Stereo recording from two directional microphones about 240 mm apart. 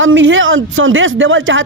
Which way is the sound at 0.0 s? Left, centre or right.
Right.